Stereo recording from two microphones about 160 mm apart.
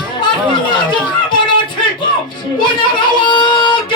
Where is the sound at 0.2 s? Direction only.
30° left (ahead or behind).